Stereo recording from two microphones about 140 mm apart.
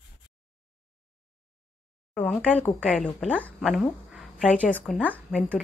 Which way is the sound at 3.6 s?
Centre (ahead or behind).